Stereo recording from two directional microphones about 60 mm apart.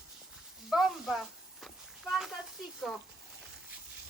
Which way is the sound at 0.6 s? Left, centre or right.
Centre.